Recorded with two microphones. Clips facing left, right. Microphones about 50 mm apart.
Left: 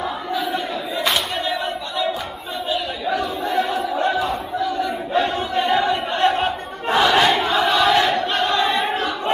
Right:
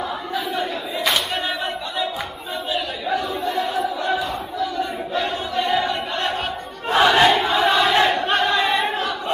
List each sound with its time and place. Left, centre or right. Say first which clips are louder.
0.5 s a sound: left 1 dB; centre
3.2 s choir: left 3 dB; left
5.5 s chant: left 1 dB; centre
6.1 s crowd: left 5 dB; left
7.1 s a sound: right 2 dB; centre
7.9 s battle cry: even; centre
8.5 s choir: even; centre